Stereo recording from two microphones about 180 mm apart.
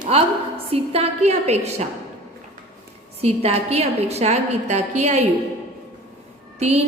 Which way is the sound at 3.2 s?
35° right (ahead or behind).